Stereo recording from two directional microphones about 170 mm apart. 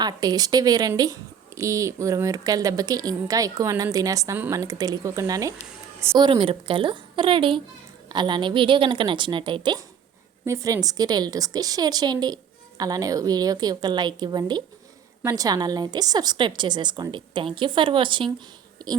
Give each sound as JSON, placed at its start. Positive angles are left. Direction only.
{"t": 0.0, "sound": "speech", "side_deg": -25}